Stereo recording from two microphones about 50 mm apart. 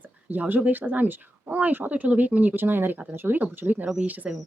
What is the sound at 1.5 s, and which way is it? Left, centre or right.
Speech, right.